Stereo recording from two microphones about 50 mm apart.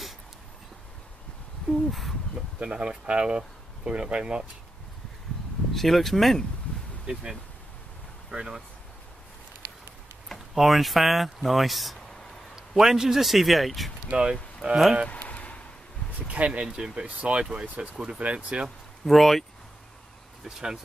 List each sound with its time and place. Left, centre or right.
1.9 s speech: centre
2.6 s speech: right
5.7 s speech: centre
7.1 s speech: centre
8.3 s speech: centre
10.2 s a sound: centre
10.6 s speech: centre
12.1 s a sound: centre
12.5 s speech: centre
14.1 s speech: centre
15.0 s a sound: left
16.2 s speech: right
19.0 s speech: centre
20.4 s speech: centre